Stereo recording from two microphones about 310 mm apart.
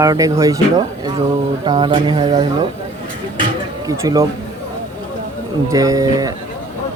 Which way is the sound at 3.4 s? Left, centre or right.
Centre.